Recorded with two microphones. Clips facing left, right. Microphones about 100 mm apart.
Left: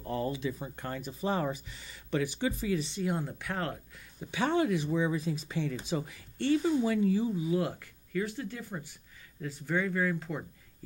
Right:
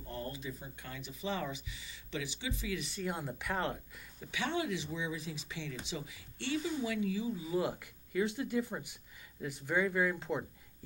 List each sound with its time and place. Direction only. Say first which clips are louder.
0.0 s a sound: left 9 dB; 90° left
0.7 s speech: left 9 dB; 50° left (ahead or behind)
3.0 s speech: left 5 dB; centre (ahead or behind)
4.3 s speech: left 7 dB; 40° left (ahead or behind)
7.4 s speech: left 4 dB; 5° right (ahead or behind); by 10.4 s 20° right (ahead or behind)